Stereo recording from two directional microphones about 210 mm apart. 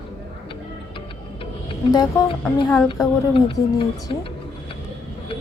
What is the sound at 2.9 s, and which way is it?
Speech, 25° left (ahead or behind).